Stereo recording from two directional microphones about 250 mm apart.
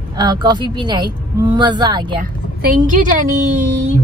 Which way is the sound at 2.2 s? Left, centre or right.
Right.